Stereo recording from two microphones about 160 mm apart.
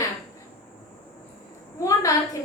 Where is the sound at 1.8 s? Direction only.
20° left (ahead or behind).